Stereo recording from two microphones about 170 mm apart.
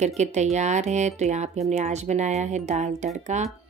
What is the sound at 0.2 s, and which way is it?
A woman's voice, 40° right (ahead or behind).